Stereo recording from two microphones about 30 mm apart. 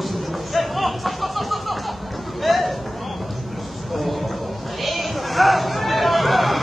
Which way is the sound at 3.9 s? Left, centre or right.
Centre.